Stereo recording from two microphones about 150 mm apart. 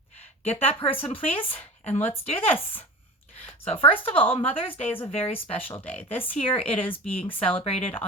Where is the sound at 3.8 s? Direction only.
40° left (ahead or behind).